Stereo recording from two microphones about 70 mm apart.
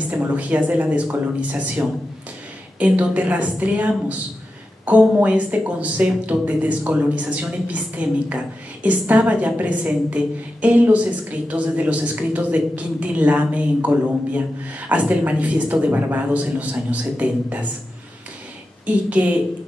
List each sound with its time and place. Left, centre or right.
0.2 s a woman's voice: right
19.2 s a woman's voice: right